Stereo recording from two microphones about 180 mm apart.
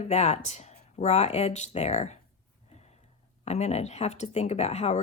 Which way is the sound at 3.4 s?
35° left (ahead or behind).